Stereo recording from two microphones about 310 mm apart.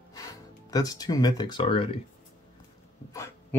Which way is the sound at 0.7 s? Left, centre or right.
Centre.